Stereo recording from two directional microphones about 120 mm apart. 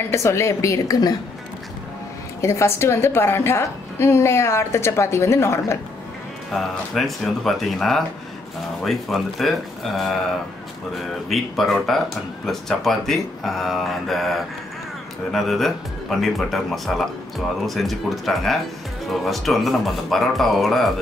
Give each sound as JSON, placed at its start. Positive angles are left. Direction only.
{"t": 0.1, "sound": "a woman's voice", "side_deg": 25}
{"t": 2.4, "sound": "a woman's voice", "side_deg": 25}
{"t": 6.5, "sound": "speech", "side_deg": 0}